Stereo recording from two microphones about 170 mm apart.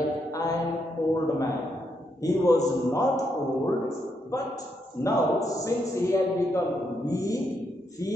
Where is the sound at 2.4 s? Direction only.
20° left (ahead or behind).